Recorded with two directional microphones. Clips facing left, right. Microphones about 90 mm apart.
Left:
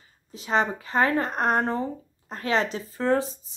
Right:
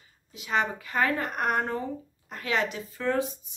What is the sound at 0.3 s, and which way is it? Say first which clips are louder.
Speech: left 3 dB; 35° left (ahead or behind).